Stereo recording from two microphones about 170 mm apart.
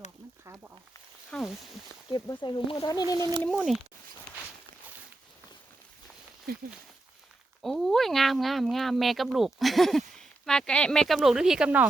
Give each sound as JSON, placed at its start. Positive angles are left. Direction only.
{"t": 1.3, "sound": "speech", "side_deg": 5}
{"t": 2.0, "sound": "speech", "side_deg": 25}
{"t": 3.2, "sound": "speech", "side_deg": -25}
{"t": 6.5, "sound": "speech", "side_deg": -65}
{"t": 7.6, "sound": "speech", "side_deg": 0}